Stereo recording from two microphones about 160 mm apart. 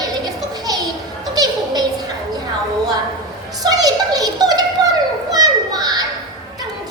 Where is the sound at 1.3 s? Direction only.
25° right (ahead or behind).